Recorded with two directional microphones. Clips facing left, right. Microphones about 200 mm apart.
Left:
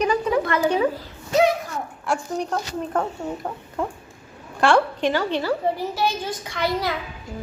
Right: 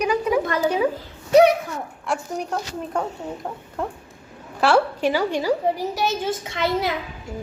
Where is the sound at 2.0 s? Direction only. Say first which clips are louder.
Left 2 dB; 5° right (ahead or behind); by 6.9 s 25° right (ahead or behind).